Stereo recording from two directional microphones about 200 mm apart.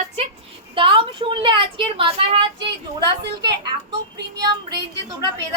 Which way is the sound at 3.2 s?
55° right (ahead or behind).